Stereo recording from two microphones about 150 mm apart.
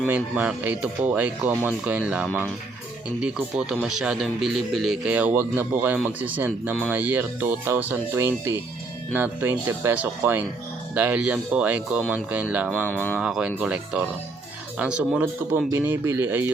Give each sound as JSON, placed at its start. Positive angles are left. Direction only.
{"t": 0.1, "sound": "a man's voice", "side_deg": -10}
{"t": 12.8, "sound": "speech", "side_deg": 10}
{"t": 13.1, "sound": "a man's voice", "side_deg": -5}